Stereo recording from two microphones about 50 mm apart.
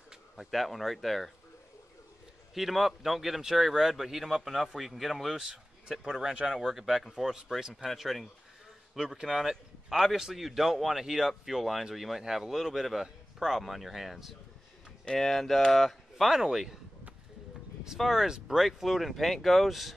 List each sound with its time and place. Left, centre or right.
0.4 s speech: centre
2.5 s speech: centre
8.9 s speech: centre
15.1 s speech: centre
17.9 s speech: centre
18.7 s speech: centre